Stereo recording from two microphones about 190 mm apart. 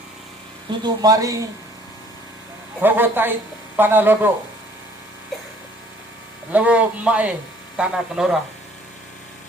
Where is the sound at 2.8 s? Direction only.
10° right (ahead or behind).